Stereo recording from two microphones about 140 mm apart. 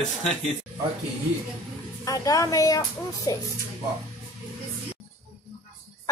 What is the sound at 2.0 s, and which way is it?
A woman's voice, 25° left (ahead or behind).